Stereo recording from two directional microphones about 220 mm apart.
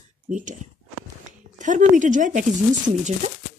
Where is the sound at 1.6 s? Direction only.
35° right (ahead or behind).